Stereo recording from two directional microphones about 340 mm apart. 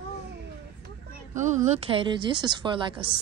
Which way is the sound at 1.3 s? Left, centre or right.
Right.